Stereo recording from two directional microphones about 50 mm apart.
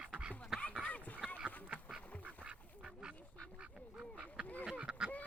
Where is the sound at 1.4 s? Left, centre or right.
Right.